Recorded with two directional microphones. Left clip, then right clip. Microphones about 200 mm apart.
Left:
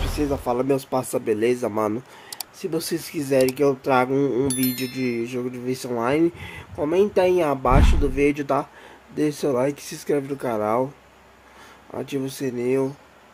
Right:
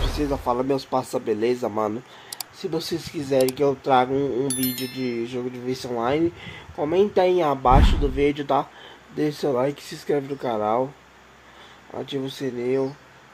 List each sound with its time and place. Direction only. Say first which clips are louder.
0.2 s speech: left 1 dB; 15° left (ahead or behind)
11.9 s speech: left 1 dB; 20° left (ahead or behind)